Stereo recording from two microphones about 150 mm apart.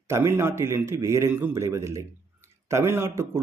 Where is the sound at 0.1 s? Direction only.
15° right (ahead or behind).